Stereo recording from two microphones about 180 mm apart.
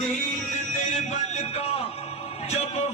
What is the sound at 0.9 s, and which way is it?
Music, 40° left (ahead or behind).